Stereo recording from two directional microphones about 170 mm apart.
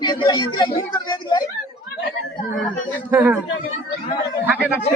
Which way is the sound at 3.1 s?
10° right (ahead or behind).